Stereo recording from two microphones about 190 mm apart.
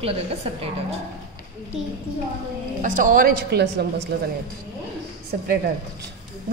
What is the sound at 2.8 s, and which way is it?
A woman's voice, 45° right (ahead or behind).